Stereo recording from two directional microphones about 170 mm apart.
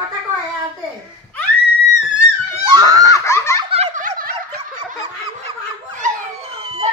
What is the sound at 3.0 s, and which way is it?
Belly laugh, 15° left (ahead or behind).